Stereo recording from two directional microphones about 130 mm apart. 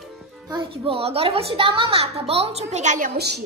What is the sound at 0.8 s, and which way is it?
A woman's voice, 45° right (ahead or behind).